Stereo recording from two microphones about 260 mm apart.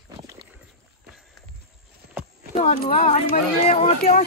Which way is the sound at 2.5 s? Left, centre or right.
Left.